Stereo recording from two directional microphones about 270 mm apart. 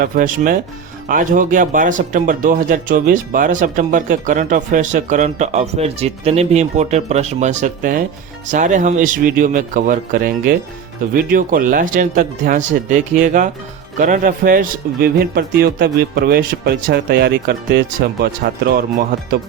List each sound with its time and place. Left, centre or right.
0.0 s speech: right